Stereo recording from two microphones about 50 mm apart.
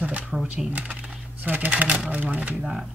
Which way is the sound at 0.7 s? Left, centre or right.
Right.